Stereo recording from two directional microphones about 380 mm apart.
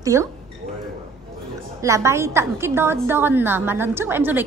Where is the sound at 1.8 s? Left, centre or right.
Centre.